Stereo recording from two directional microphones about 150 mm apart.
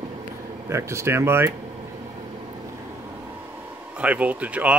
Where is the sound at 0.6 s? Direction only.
20° right (ahead or behind).